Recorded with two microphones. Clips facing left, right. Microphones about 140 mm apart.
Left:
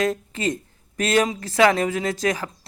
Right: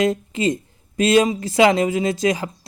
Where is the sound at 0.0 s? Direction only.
15° right (ahead or behind).